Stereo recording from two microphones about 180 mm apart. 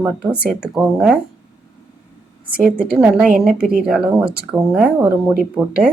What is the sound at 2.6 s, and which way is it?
Speech, 55° right (ahead or behind).